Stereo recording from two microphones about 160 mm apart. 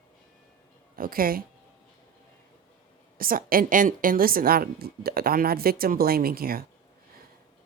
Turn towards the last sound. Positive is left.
turn(degrees=-65)  # may be behind; listen again after turning